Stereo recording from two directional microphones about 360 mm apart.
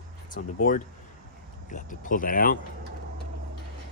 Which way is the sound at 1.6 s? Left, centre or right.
Left.